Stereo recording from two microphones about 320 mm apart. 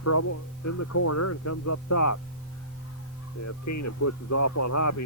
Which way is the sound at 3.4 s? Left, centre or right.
Left.